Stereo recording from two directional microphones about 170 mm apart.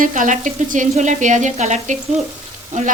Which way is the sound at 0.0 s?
50° right (ahead or behind).